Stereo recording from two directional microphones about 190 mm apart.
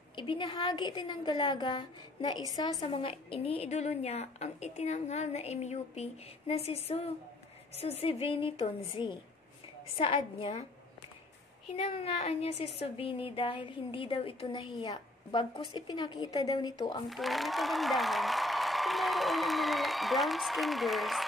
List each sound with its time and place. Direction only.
0.1 s a woman's voice: 25° left (ahead or behind)
11.7 s a woman's voice: 35° left (ahead or behind)
17.1 s speech: centre (ahead or behind)